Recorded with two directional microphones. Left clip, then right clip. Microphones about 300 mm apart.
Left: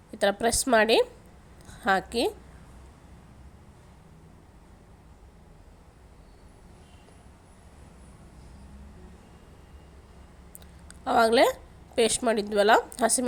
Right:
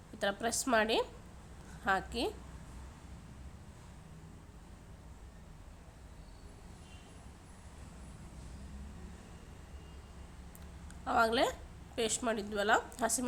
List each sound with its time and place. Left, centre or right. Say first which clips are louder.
0.2 s a woman's voice: left 10 dB; centre
11.0 s a woman's voice: left 9 dB; centre